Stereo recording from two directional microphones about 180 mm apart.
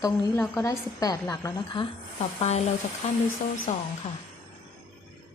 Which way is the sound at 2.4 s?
35° left (ahead or behind).